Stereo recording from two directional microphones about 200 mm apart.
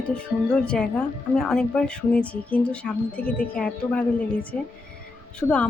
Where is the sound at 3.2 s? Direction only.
45° left (ahead or behind).